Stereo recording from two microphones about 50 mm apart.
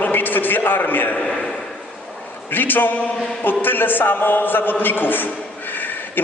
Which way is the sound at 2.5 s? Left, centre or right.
Left.